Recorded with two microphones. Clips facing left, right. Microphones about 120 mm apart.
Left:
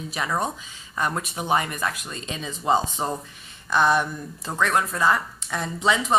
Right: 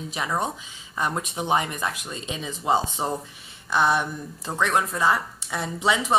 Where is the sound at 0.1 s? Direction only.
15° right (ahead or behind).